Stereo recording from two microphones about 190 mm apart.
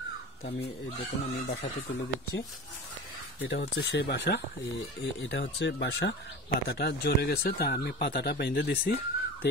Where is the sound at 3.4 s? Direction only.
60° left (ahead or behind).